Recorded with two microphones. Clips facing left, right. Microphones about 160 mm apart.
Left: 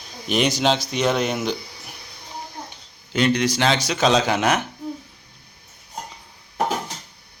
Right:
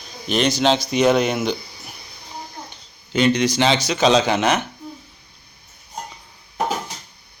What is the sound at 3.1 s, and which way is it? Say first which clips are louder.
Speech: right 2 dB; 5° left (ahead or behind).